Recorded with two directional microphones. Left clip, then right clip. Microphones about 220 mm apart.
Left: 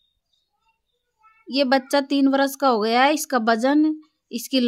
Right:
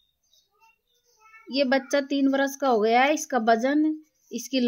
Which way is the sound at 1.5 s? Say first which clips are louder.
Left 4 dB; 30° left (ahead or behind).